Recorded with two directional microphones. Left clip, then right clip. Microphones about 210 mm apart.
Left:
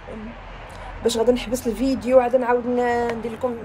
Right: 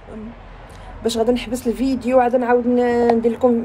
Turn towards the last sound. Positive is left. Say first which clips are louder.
# right 9 dB
turn(degrees=-25)  # may be behind; listen again after turning